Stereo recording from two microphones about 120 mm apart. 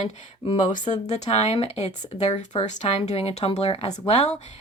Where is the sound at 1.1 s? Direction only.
70° left (ahead or behind).